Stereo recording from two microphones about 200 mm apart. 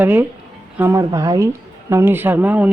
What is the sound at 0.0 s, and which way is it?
Speech, 10° right (ahead or behind).